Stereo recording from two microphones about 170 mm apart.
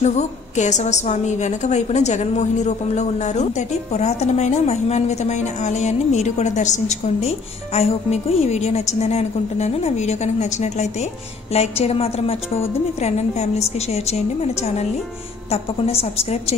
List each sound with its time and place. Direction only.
0.0 s a woman's voice: 45° left (ahead or behind)